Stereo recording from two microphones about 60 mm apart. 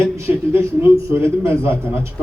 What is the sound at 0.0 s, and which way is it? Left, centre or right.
A man's voice, right.